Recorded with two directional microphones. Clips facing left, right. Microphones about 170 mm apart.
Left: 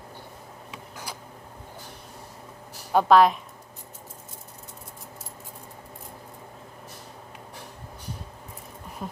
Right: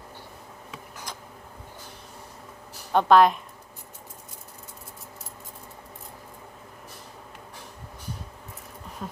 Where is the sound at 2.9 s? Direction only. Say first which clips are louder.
Even; 5° left (ahead or behind).